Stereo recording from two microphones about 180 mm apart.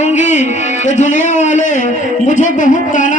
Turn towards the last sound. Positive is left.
turn(degrees=45)  # may be behind; listen again after turning